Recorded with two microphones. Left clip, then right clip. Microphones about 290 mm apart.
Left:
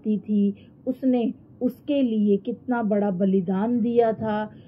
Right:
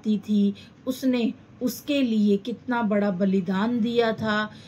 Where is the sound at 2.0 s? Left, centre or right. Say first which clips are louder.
Left 1 dB; right.